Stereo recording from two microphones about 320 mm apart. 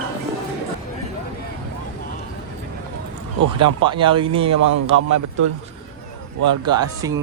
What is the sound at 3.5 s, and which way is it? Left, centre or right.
Speech, centre.